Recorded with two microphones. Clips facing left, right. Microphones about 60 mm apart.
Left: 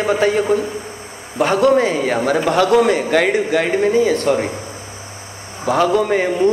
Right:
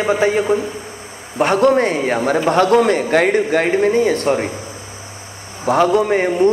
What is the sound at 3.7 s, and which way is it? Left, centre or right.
Speech, right.